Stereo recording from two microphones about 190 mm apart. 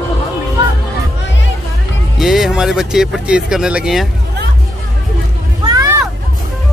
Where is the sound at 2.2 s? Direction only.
Centre (ahead or behind).